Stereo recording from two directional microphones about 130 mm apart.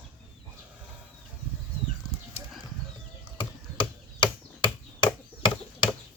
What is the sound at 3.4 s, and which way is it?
Chop, 40° left (ahead or behind).